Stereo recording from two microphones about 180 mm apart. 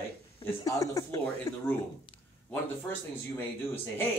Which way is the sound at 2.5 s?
10° left (ahead or behind).